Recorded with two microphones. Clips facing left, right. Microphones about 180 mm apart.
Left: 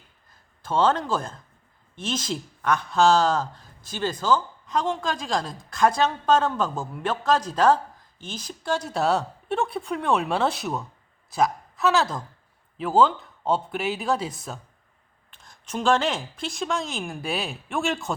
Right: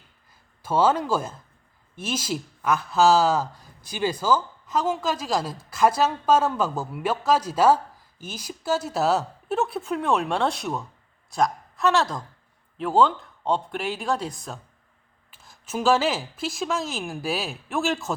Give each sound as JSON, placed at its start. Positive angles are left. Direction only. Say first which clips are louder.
{"t": 0.6, "sound": "a woman's voice", "louder": "right 1 dB", "side_deg": -10}